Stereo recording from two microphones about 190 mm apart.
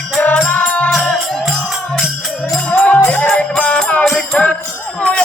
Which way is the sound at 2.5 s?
5° left (ahead or behind).